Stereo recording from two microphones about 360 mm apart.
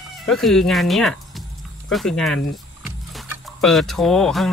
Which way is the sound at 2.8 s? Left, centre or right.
Centre.